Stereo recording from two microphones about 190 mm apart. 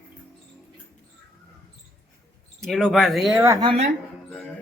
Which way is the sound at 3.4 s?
20° right (ahead or behind).